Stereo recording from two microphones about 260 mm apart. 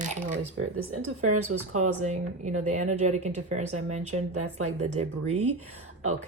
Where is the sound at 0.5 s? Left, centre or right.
Right.